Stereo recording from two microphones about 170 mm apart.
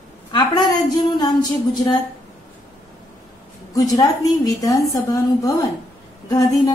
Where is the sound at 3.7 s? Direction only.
20° left (ahead or behind).